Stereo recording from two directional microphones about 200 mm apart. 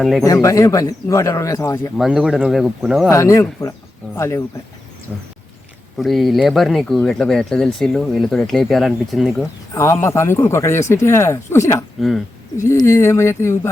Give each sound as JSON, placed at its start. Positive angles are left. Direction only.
{"t": 0.0, "sound": "speech", "side_deg": 0}
{"t": 0.4, "sound": "speech", "side_deg": 15}
{"t": 2.0, "sound": "speech", "side_deg": 0}
{"t": 3.1, "sound": "speech", "side_deg": 15}
{"t": 6.0, "sound": "speech", "side_deg": 0}
{"t": 9.7, "sound": "speech", "side_deg": 15}
{"t": 11.9, "sound": "speech", "side_deg": 0}
{"t": 12.6, "sound": "speech", "side_deg": 15}